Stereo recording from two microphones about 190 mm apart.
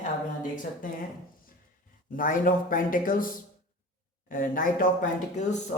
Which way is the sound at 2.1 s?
45° left (ahead or behind).